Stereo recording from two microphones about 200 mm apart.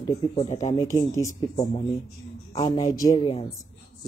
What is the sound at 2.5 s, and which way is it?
Speech, 35° left (ahead or behind).